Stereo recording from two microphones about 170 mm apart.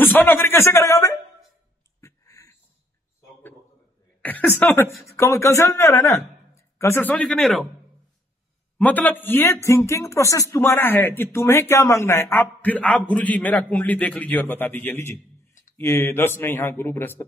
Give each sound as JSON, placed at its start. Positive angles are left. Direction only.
{"t": 0.0, "sound": "a man's voice", "side_deg": 10}
{"t": 2.0, "sound": "a sound", "side_deg": 20}
{"t": 4.2, "sound": "a man's voice", "side_deg": 10}
{"t": 8.7, "sound": "a man's voice", "side_deg": 10}